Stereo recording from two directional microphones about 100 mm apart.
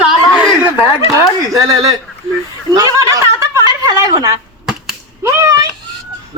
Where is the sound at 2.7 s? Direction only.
35° right (ahead or behind).